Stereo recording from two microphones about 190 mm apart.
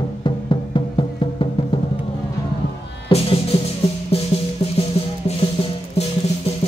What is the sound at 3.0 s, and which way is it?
Music, 30° left (ahead or behind).